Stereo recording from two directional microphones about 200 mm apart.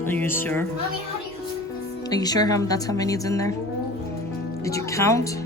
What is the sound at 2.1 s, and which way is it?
A woman's voice, 20° left (ahead or behind).